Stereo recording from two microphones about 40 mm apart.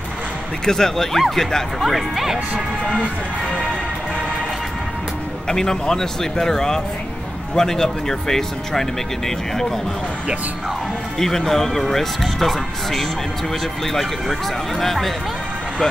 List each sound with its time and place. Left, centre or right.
0.7 s speech: centre
3.0 s speech: left
5.5 s speech: centre
11.1 s speech: centre
14.8 s speech: centre